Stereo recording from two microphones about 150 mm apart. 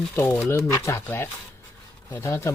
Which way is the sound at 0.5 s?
15° left (ahead or behind).